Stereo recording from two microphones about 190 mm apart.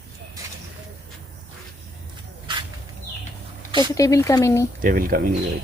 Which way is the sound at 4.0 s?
15° left (ahead or behind).